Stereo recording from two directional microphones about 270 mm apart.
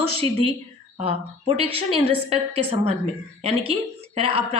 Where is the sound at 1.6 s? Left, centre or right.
Left.